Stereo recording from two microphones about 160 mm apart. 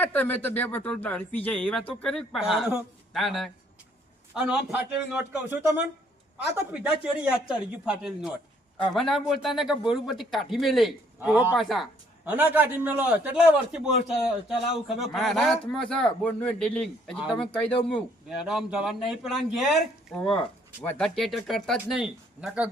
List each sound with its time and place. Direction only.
0.0 s speech: 10° left (ahead or behind)
1.8 s speech: 35° left (ahead or behind)
2.0 s a man's voice: centre (ahead or behind)
6.8 s a man's voice: 5° right (ahead or behind)